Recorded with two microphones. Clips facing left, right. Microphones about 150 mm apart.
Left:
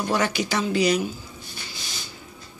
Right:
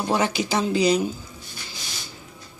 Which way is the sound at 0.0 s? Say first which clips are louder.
Right 1 dB; 30° right (ahead or behind).